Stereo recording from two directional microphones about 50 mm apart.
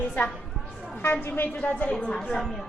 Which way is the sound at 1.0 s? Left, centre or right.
Left.